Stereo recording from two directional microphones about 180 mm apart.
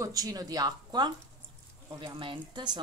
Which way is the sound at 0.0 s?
20° right (ahead or behind).